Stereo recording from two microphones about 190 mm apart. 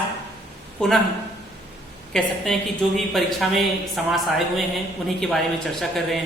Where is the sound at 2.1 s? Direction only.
Centre (ahead or behind).